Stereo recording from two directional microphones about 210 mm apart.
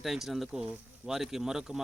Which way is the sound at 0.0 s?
Centre (ahead or behind).